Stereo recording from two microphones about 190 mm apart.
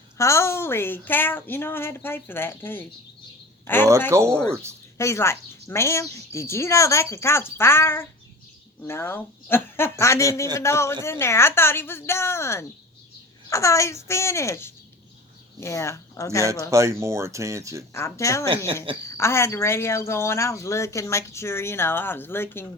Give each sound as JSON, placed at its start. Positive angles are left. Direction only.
{"t": 0.2, "sound": "speech", "side_deg": 15}
{"t": 16.7, "sound": "speech", "side_deg": -15}
{"t": 17.9, "sound": "speech", "side_deg": 15}